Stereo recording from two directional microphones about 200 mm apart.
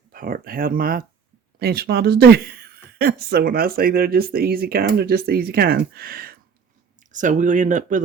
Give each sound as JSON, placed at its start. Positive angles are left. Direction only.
{"t": 0.1, "sound": "a woman's voice", "side_deg": -45}